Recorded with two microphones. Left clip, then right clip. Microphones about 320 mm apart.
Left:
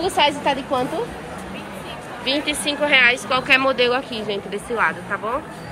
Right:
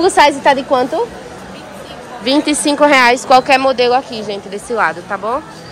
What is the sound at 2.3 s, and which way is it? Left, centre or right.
A woman's voice, centre.